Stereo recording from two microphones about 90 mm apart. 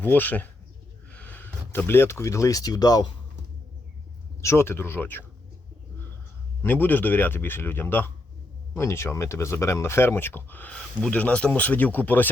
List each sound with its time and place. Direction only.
0.0 s speech: 20° left (ahead or behind)
1.1 s a sound: 15° left (ahead or behind)
1.9 s speech: 30° left (ahead or behind); by 3.1 s 45° left (ahead or behind)
4.4 s speech: 30° left (ahead or behind)
6.6 s speech: 20° left (ahead or behind)